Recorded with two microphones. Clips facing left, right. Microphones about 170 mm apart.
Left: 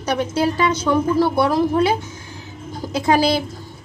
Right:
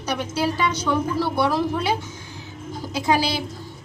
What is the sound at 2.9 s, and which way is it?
Speech, 50° left (ahead or behind).